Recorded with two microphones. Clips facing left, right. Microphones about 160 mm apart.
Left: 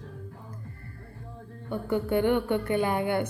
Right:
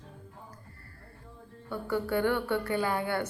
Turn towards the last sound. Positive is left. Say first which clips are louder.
# left 4 dB
turn(degrees=20)  # may be behind; listen again after turning